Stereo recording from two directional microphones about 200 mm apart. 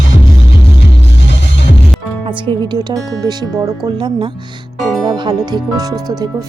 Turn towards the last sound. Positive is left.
turn(degrees=-20)  # may be behind; listen again after turning